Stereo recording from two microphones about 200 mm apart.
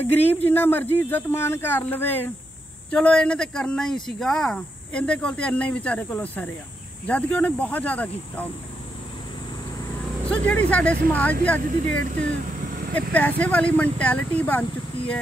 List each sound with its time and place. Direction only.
0.0 s speech: 10° left (ahead or behind)
10.3 s speech: 5° left (ahead or behind)
11.8 s speech: 40° right (ahead or behind)
13.1 s speech: 5° left (ahead or behind)